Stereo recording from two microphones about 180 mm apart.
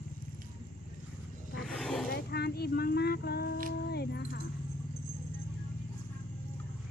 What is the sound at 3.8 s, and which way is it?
Music, 65° left (ahead or behind).